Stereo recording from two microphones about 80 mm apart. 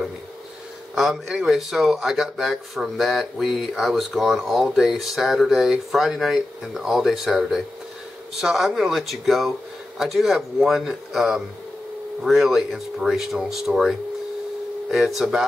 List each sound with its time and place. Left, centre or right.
0.9 s speech: centre